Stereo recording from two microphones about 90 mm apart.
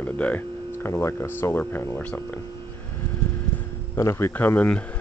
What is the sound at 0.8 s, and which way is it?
Speech, 30° left (ahead or behind).